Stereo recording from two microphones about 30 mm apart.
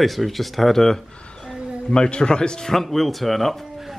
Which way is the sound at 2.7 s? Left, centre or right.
Centre.